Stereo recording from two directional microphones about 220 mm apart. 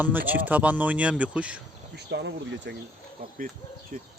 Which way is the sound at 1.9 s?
50° right (ahead or behind).